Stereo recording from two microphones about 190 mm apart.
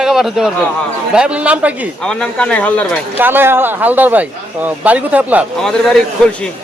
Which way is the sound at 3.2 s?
10° right (ahead or behind).